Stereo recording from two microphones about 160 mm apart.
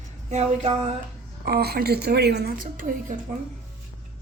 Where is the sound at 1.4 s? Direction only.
80° right; by 2.9 s 60° right (ahead or behind).